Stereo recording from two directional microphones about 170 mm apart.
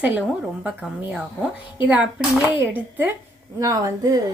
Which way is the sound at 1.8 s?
5° right (ahead or behind).